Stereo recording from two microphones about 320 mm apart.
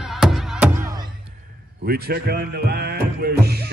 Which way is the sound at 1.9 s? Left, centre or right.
Right.